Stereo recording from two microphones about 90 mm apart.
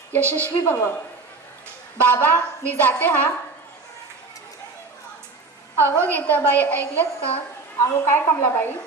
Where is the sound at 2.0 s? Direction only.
20° left (ahead or behind).